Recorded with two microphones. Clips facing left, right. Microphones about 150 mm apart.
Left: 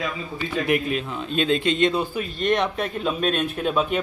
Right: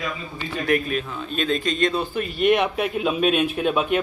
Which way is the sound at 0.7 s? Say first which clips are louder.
Right 2 dB; 20° left (ahead or behind).